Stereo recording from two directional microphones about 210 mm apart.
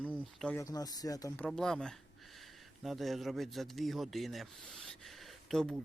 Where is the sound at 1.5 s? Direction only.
Centre (ahead or behind).